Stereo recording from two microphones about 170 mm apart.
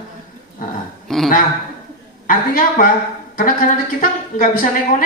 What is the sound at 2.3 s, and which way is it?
A woman's voice, 50° left (ahead or behind).